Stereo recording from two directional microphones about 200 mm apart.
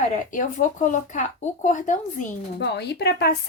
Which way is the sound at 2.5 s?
60° left (ahead or behind).